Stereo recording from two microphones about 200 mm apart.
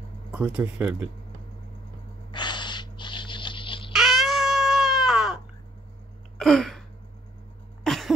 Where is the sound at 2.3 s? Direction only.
20° left (ahead or behind).